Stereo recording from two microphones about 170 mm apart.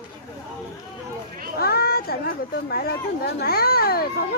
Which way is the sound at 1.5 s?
65° left (ahead or behind).